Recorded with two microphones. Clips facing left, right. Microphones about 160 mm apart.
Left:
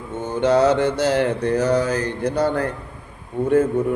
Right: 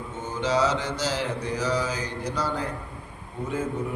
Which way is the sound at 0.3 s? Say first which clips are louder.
Left 8 dB; 60° left (ahead or behind).